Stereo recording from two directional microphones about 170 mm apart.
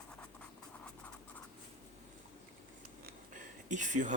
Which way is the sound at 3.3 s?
45° right (ahead or behind).